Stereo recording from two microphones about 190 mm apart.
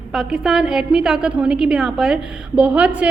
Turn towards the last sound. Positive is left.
turn(degrees=-5)  # may be behind; listen again after turning